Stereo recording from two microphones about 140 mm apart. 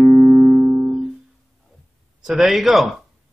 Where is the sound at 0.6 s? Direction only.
15° right (ahead or behind).